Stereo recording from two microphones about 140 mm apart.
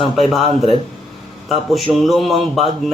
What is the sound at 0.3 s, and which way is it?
Speech, 45° right (ahead or behind).